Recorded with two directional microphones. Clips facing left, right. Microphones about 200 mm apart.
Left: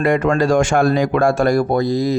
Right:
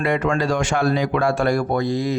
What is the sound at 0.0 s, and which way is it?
A man's voice, 45° left (ahead or behind).